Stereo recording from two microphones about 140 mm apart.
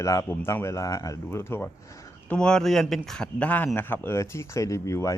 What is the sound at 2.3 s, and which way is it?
Speech, 5° left (ahead or behind).